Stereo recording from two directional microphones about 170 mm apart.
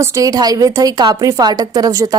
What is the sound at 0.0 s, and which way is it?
A woman's voice, 20° right (ahead or behind).